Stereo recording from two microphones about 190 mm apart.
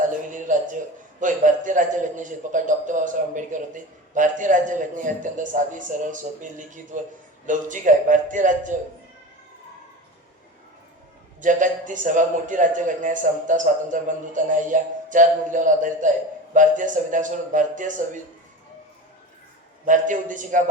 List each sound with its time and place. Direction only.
0.0 s a sound: 40° right (ahead or behind)
1.2 s a man's voice: 40° right (ahead or behind)
11.3 s a man's voice: 40° right (ahead or behind)
19.8 s a man's voice: 40° right (ahead or behind)